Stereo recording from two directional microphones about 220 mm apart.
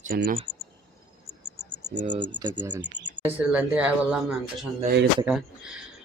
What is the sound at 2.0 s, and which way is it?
Speech, 20° right (ahead or behind).